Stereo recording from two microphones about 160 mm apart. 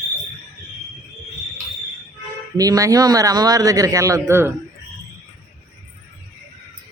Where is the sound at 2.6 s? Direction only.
20° right (ahead or behind).